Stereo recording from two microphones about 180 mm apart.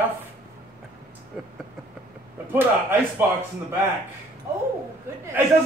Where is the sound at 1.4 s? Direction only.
Centre (ahead or behind).